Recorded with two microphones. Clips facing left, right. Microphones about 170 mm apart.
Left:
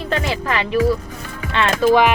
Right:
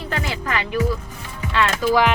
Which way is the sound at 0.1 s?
25° left (ahead or behind).